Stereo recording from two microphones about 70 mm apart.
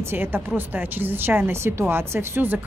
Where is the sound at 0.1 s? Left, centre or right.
Right.